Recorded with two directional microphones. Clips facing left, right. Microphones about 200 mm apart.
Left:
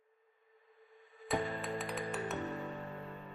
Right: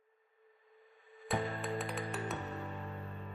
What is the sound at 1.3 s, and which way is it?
Music, centre (ahead or behind).